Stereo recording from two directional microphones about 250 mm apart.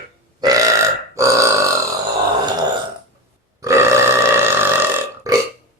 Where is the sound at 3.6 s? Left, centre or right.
Centre.